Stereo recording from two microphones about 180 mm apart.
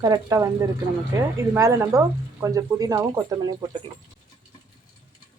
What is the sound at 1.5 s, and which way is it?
Speech, 15° right (ahead or behind).